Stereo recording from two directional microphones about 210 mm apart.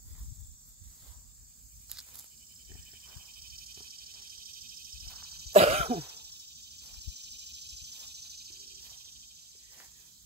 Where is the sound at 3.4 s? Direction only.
45° right (ahead or behind).